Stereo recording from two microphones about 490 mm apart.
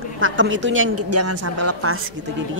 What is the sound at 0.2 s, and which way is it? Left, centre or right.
A woman's voice, right.